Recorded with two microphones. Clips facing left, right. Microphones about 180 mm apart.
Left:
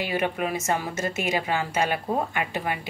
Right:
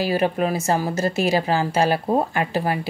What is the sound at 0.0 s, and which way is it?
Speech, 35° right (ahead or behind).